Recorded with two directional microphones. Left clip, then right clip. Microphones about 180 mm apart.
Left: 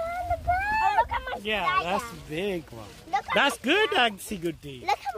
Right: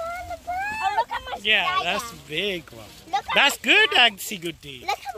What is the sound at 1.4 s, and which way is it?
Speech, 40° left (ahead or behind).